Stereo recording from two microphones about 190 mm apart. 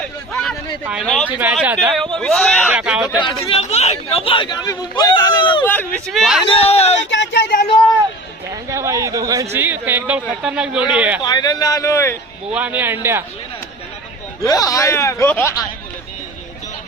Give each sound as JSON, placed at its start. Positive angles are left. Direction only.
{"t": 0.9, "sound": "speech", "side_deg": 0}
{"t": 3.2, "sound": "speech", "side_deg": 25}
{"t": 5.1, "sound": "a sound", "side_deg": 20}
{"t": 5.6, "sound": "speech", "side_deg": 5}
{"t": 6.4, "sound": "speech", "side_deg": 30}
{"t": 7.1, "sound": "speech", "side_deg": 70}
{"t": 8.7, "sound": "speech", "side_deg": -15}
{"t": 11.2, "sound": "speech", "side_deg": 20}
{"t": 12.5, "sound": "speech", "side_deg": -10}
{"t": 14.4, "sound": "speech", "side_deg": 20}